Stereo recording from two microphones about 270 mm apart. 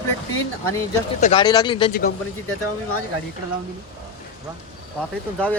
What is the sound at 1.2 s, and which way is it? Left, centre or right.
Speech, centre.